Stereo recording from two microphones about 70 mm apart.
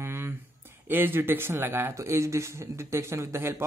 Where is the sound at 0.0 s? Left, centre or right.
Right.